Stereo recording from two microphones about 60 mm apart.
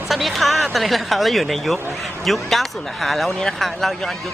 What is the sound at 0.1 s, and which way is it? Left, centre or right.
Speech, centre.